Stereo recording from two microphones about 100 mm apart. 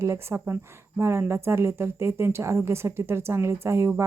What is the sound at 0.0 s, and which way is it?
Speech, 25° right (ahead or behind).